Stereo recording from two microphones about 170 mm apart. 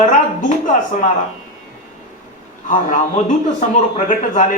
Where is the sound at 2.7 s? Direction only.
50° left (ahead or behind).